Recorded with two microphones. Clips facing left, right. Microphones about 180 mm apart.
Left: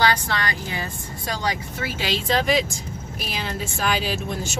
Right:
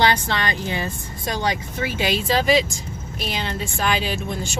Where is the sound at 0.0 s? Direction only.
25° right (ahead or behind).